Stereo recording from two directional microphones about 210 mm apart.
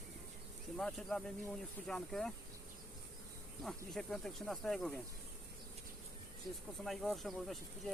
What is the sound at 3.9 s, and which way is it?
Speech, centre (ahead or behind).